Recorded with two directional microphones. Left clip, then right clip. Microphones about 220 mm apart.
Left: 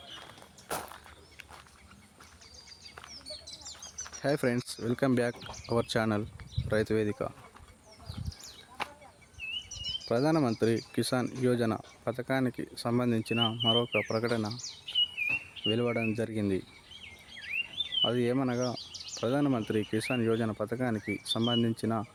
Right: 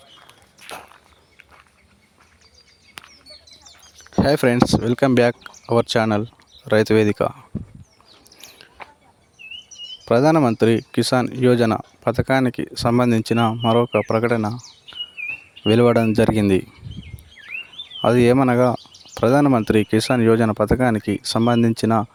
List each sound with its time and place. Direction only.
3.1 s bird: 25° right (ahead or behind)
4.2 s speech: 40° right (ahead or behind)
10.1 s speech: 40° right (ahead or behind)
18.0 s speech: 45° right (ahead or behind)